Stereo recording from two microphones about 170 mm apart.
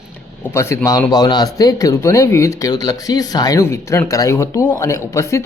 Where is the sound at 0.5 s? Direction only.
15° left (ahead or behind).